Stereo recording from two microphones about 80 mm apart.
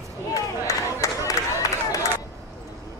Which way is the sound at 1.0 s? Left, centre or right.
Left.